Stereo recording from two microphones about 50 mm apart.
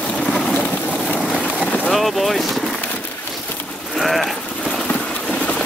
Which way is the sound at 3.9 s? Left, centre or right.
Centre.